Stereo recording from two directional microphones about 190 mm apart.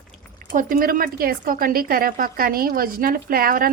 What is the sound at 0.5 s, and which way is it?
A woman's voice, 50° right (ahead or behind).